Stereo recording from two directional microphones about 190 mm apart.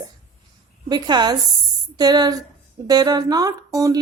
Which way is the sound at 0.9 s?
20° right (ahead or behind).